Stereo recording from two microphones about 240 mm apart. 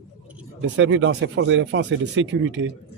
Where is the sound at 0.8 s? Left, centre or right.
Right.